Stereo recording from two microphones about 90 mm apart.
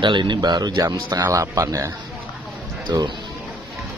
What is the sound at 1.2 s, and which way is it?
Speech, 35° right (ahead or behind).